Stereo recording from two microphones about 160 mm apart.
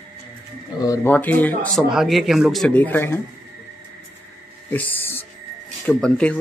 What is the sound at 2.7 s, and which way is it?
Speech, 10° left (ahead or behind).